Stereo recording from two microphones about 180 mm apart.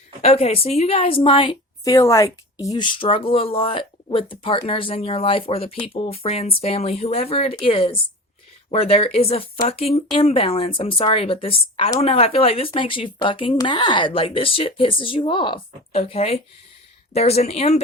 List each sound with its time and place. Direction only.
0.2 s a woman's voice: 35° left (ahead or behind)